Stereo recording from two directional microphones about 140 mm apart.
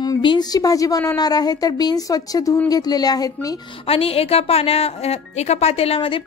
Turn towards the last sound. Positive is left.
turn(degrees=40)  # may be behind; listen again after turning